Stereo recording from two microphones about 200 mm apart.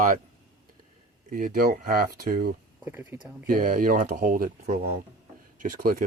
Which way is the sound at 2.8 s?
10° right (ahead or behind).